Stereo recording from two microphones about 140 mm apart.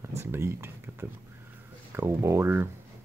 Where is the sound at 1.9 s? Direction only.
20° right (ahead or behind).